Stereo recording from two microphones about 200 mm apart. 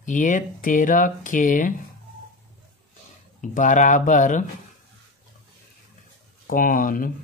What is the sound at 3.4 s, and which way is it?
Speech, 40° left (ahead or behind).